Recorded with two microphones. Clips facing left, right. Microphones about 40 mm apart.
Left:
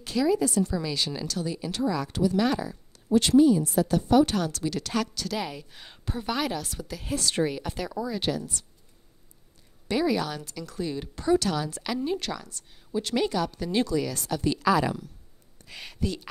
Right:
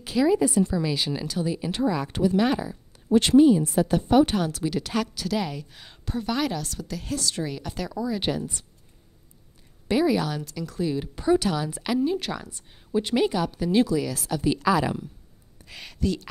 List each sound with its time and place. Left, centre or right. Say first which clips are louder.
0.0 s speech: right 3 dB; centre
3.1 s speech: right 2 dB; right; by 7.2 s centre
7.2 s speech: left 4 dB; left
7.4 s speech: left 2 dB; centre
8.2 s speech: right 2 dB; right
9.8 s speech: right 3 dB; centre